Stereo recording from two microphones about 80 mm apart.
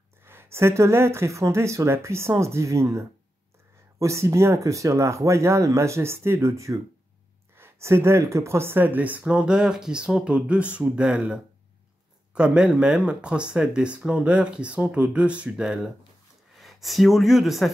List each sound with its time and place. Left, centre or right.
0.2 s speech: right
9.2 s speech: centre